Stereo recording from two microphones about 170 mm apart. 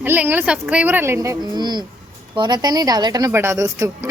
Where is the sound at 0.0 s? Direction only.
10° right (ahead or behind).